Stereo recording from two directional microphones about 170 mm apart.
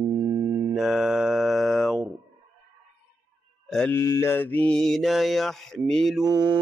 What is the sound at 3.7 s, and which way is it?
Mantra, 10° left (ahead or behind).